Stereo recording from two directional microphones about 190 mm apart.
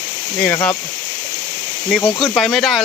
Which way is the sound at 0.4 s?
10° left (ahead or behind).